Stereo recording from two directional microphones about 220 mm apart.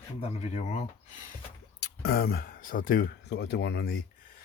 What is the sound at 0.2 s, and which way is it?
Speech, 30° left (ahead or behind).